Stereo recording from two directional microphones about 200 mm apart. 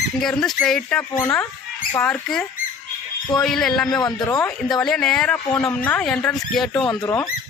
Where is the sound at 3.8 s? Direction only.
20° left (ahead or behind).